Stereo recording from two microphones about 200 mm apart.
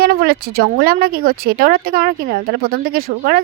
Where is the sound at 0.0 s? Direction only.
50° right (ahead or behind).